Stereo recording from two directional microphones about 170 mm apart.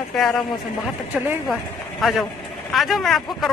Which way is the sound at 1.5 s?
Centre (ahead or behind).